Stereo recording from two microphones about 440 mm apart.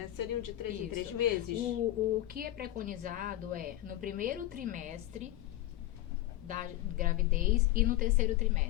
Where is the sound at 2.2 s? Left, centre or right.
Centre.